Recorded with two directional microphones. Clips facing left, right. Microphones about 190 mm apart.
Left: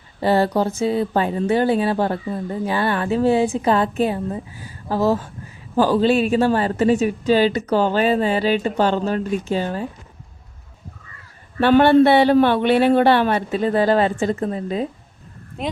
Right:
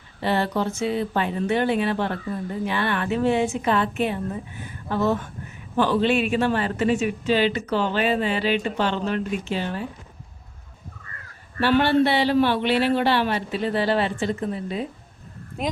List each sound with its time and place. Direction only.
0.2 s speech: 40° left (ahead or behind)
11.6 s a man's voice: 50° left (ahead or behind)